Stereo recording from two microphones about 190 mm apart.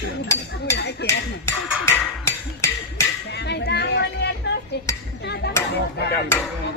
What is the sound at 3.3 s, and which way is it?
Speech, 60° left (ahead or behind).